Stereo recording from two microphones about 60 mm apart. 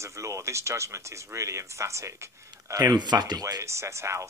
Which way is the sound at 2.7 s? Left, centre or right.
Right.